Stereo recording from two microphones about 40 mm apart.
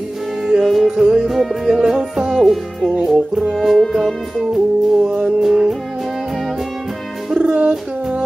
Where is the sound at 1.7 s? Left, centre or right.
Centre.